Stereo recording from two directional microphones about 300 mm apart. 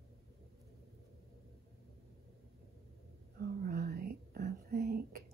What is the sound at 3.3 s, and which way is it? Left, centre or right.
Whispering, right.